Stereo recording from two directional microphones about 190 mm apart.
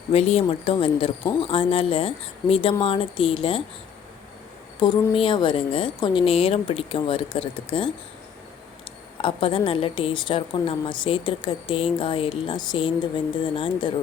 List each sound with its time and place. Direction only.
0.1 s a woman's voice: 35° left (ahead or behind)
5.1 s a woman's voice: 25° left (ahead or behind)
9.2 s a woman's voice: 30° left (ahead or behind)